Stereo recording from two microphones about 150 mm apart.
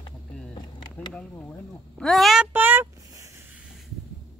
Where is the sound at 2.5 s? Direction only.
15° right (ahead or behind).